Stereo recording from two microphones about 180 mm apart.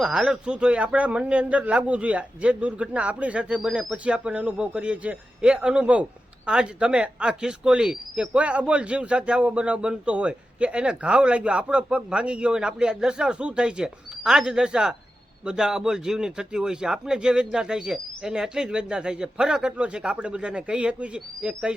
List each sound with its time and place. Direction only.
0.0 s a man's voice: 5° right (ahead or behind)